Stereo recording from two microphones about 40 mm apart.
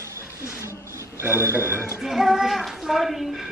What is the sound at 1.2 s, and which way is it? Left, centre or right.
Speech, right.